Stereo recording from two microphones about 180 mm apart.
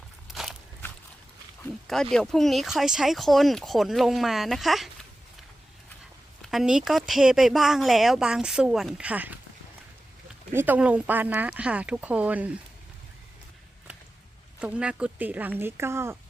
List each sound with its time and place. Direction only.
0.3 s biting: centre (ahead or behind)
1.9 s speech: 5° left (ahead or behind)
6.4 s speech: centre (ahead or behind)
10.5 s speech: 10° right (ahead or behind)
14.6 s speech: 5° right (ahead or behind)